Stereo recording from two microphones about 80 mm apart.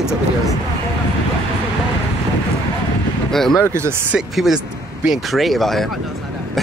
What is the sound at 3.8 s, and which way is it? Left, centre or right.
Speech, right.